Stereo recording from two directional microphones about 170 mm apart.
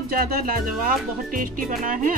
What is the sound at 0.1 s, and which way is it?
Speech, 60° right (ahead or behind).